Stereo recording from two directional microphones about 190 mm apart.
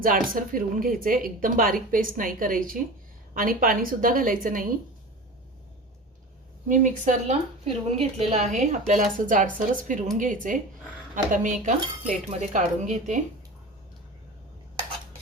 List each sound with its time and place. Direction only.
0.0 s speech: 45° right (ahead or behind)
6.7 s a woman's voice: 40° right (ahead or behind)